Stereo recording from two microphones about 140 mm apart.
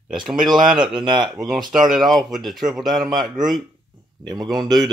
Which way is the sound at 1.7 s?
Centre (ahead or behind).